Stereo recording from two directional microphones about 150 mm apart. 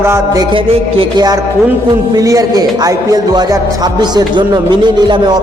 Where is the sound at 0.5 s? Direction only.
30° right (ahead or behind).